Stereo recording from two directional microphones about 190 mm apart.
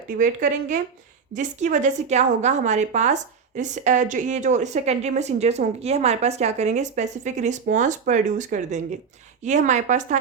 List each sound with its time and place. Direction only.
0.2 s a woman's voice: 40° right (ahead or behind)